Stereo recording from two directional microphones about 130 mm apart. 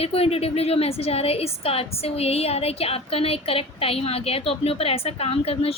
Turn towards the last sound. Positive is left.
turn(degrees=50)  # may be behind; listen again after turning